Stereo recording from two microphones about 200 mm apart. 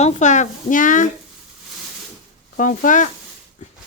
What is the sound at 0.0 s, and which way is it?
Speech, 35° left (ahead or behind).